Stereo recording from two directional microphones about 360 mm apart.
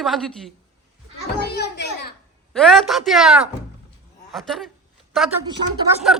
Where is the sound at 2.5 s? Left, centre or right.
Centre.